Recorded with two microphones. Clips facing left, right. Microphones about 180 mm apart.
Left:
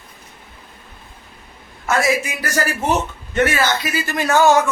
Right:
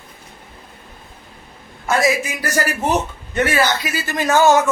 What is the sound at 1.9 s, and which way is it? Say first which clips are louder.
A man's voice: right 1 dB; 15° right (ahead or behind).